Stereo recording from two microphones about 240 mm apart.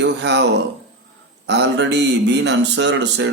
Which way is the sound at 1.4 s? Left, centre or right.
Right.